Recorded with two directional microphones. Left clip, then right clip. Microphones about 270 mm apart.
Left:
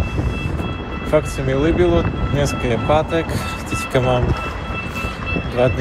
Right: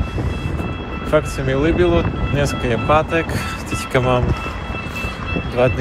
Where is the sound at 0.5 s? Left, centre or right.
Left.